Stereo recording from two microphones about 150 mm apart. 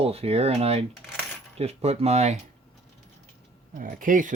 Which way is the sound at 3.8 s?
65° right (ahead or behind).